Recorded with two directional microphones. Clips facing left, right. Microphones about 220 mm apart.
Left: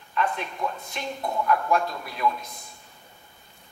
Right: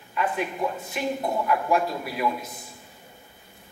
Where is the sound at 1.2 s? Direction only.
25° right (ahead or behind).